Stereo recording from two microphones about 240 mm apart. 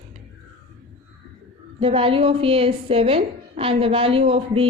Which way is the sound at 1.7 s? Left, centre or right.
Right.